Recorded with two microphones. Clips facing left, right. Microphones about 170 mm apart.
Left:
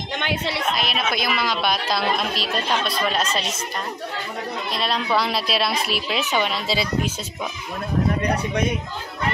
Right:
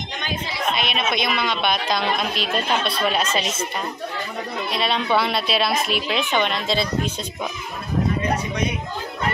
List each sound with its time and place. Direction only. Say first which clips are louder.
0.2 s a sound: left 4 dB; 70° left (ahead or behind)
0.7 s speech: right 1 dB; centre (ahead or behind)
4.7 s speech: right 2 dB; centre (ahead or behind)